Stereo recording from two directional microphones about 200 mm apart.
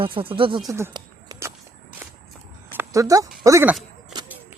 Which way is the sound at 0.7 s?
15° right (ahead or behind).